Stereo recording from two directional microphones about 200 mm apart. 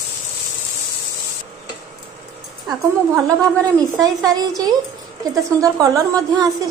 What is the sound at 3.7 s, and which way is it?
A woman's voice, 20° right (ahead or behind).